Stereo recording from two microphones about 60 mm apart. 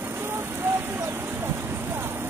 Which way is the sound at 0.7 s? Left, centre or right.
Right.